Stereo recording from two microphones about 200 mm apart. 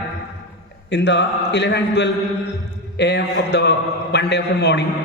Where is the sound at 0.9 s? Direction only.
60° left (ahead or behind).